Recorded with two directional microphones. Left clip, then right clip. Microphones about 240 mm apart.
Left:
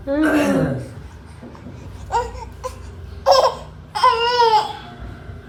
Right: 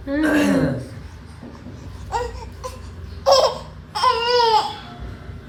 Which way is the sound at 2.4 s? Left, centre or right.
Right.